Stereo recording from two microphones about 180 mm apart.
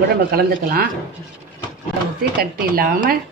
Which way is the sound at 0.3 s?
55° right (ahead or behind).